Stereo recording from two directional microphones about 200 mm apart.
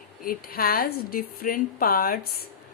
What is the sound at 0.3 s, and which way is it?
Speech, 50° left (ahead or behind).